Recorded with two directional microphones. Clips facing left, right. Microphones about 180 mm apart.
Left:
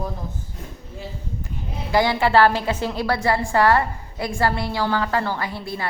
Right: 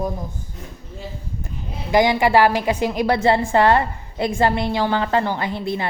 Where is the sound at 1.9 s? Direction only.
15° right (ahead or behind).